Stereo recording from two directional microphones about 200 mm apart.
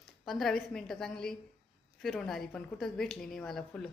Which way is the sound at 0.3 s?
Centre (ahead or behind).